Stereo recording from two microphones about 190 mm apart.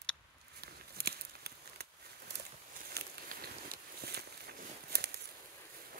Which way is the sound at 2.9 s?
55° right (ahead or behind).